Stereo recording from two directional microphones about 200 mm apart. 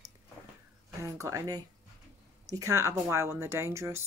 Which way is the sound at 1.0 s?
15° right (ahead or behind).